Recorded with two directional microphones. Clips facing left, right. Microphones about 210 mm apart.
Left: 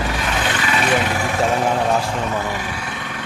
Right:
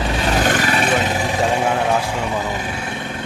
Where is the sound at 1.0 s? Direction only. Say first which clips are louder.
Right 1 dB; 20° right (ahead or behind).